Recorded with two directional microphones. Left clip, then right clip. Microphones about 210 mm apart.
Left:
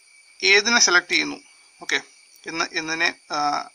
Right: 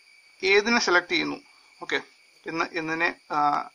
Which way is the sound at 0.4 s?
45° left (ahead or behind).